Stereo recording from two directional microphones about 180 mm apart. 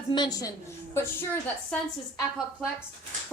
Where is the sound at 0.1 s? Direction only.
20° left (ahead or behind).